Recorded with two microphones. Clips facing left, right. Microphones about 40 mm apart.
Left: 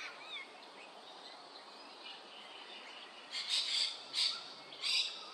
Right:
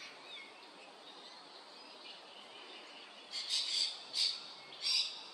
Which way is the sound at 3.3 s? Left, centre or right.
Left.